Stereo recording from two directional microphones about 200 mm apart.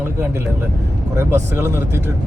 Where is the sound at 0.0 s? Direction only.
10° right (ahead or behind).